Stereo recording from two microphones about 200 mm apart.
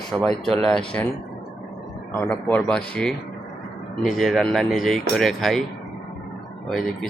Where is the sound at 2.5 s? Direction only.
5° left (ahead or behind).